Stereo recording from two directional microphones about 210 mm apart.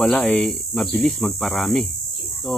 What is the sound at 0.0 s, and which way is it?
Speech, 5° left (ahead or behind).